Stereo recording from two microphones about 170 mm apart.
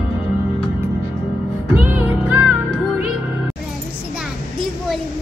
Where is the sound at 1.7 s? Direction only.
10° right (ahead or behind).